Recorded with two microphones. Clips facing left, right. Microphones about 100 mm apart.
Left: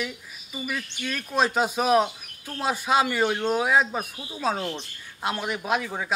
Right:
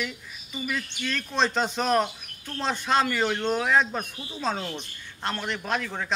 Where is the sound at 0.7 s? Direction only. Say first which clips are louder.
Right 1 dB; 10° left (ahead or behind).